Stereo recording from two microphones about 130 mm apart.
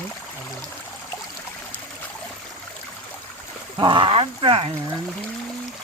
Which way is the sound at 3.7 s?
40° right (ahead or behind).